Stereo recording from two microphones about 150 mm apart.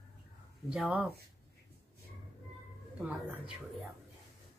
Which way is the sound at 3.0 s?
5° right (ahead or behind).